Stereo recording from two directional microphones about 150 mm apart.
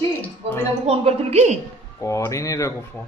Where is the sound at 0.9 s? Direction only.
45° right (ahead or behind).